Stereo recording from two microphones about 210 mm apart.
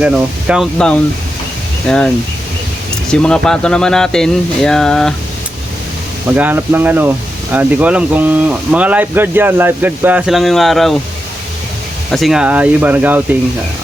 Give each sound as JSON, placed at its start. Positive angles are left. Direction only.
{"t": 0.0, "sound": "speech", "side_deg": -5}
{"t": 6.3, "sound": "speech", "side_deg": -10}
{"t": 12.1, "sound": "speech", "side_deg": 0}